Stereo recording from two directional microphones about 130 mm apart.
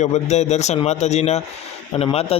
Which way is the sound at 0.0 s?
60° left (ahead or behind).